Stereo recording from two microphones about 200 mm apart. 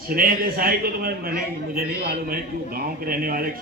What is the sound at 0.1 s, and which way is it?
A man's voice, 45° right (ahead or behind).